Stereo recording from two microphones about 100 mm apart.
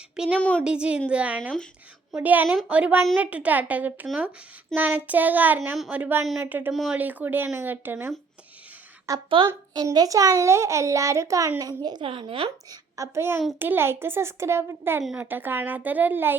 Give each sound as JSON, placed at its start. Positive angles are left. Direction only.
{"t": 0.3, "sound": "speech", "side_deg": 10}
{"t": 0.6, "sound": "child singing", "side_deg": -10}
{"t": 6.4, "sound": "speech", "side_deg": -20}
{"t": 9.1, "sound": "a child's voice", "side_deg": -35}
{"t": 11.6, "sound": "a woman's voice", "side_deg": -45}
{"t": 12.0, "sound": "speech", "side_deg": -65}
{"t": 13.0, "sound": "speech", "side_deg": -25}